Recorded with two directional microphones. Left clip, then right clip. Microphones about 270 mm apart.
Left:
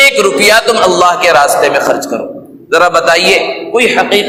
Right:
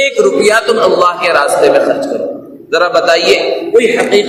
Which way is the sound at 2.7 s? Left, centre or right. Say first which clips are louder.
Left 2 dB; left.